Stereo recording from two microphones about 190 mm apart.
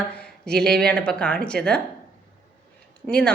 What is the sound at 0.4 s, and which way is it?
A woman's voice, 5° left (ahead or behind).